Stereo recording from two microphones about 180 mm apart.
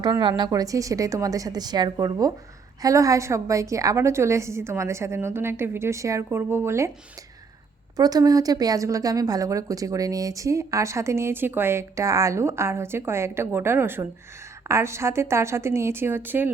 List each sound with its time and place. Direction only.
0.0 s a woman's voice: 25° right (ahead or behind)
7.9 s a woman's voice: 20° right (ahead or behind)